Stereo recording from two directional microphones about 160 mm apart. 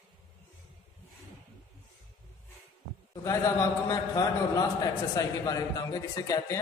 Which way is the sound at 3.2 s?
20° left (ahead or behind).